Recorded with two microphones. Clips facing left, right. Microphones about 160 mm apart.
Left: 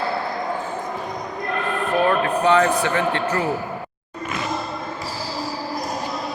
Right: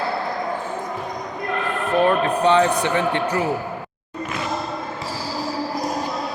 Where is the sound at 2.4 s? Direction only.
20° right (ahead or behind).